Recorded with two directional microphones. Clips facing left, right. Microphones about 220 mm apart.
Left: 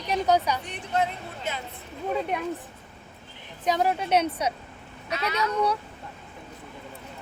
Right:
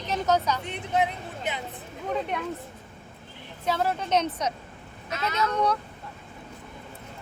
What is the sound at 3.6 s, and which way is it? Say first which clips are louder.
Speech: left 2 dB; 15° left (ahead or behind).